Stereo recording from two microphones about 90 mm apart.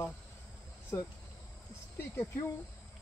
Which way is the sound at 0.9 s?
35° left (ahead or behind).